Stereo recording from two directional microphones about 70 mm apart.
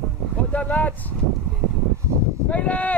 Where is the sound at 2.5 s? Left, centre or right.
Centre.